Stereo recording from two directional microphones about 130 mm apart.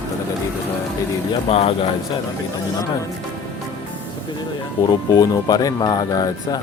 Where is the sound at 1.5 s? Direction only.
50° left (ahead or behind).